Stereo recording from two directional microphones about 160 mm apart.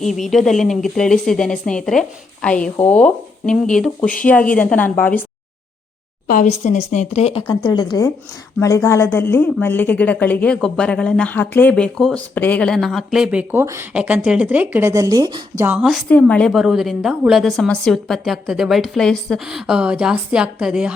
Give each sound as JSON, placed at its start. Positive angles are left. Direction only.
{"t": 0.3, "sound": "a woman's voice", "side_deg": 0}
{"t": 6.2, "sound": "a woman's voice", "side_deg": 55}
{"t": 7.4, "sound": "a woman's voice", "side_deg": 25}
{"t": 15.6, "sound": "a woman's voice", "side_deg": -5}
{"t": 16.0, "sound": "a woman's voice", "side_deg": 10}